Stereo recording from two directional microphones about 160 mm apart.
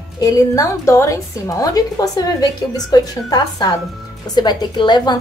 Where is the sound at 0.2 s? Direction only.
20° left (ahead or behind).